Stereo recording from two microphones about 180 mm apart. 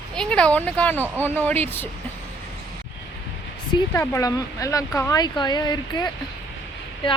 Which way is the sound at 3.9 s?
15° left (ahead or behind).